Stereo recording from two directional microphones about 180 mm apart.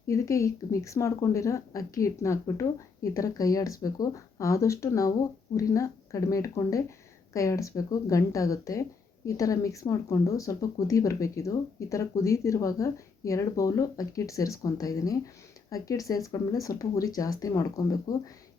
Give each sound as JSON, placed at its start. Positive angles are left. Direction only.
{"t": 0.1, "sound": "speech", "side_deg": 15}